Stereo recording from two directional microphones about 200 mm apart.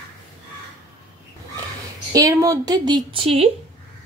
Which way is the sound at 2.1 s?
15° right (ahead or behind).